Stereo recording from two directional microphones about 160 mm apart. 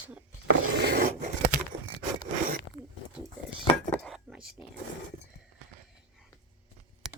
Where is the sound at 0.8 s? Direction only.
90° right.